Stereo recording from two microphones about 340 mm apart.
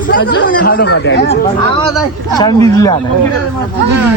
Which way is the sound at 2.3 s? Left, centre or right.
Centre.